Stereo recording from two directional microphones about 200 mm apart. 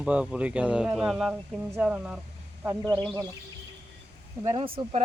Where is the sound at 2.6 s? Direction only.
15° right (ahead or behind).